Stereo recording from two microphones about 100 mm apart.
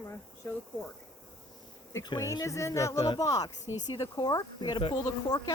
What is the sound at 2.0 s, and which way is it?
Speech, 40° left (ahead or behind).